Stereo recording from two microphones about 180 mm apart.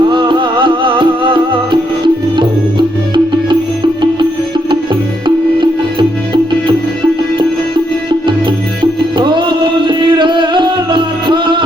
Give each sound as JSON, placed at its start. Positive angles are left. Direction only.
{"t": 0.1, "sound": "music", "side_deg": -25}
{"t": 5.2, "sound": "music", "side_deg": -25}
{"t": 9.1, "sound": "music", "side_deg": -25}